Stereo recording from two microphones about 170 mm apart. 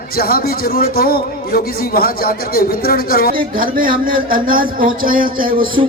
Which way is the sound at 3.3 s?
55° right (ahead or behind).